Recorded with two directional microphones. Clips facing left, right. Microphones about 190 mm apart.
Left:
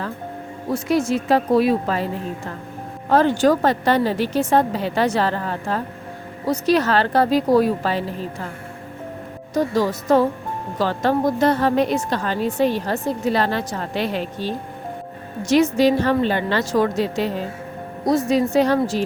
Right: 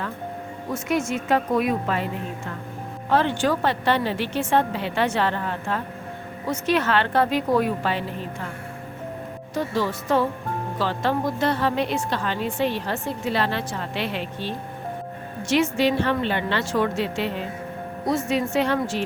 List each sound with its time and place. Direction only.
0.7 s a woman's voice: 35° left (ahead or behind)
3.1 s a woman's voice: 40° left (ahead or behind)
9.6 s a woman's voice: 40° left (ahead or behind)